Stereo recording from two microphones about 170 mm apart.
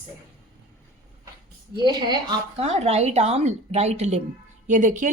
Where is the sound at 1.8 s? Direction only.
25° right (ahead or behind).